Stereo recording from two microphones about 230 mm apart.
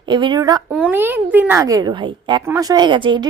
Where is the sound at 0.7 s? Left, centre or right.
Centre.